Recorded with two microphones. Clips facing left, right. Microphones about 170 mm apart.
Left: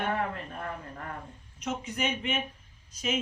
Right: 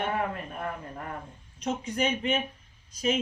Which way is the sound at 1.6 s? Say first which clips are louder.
Right 4 dB; 35° right (ahead or behind).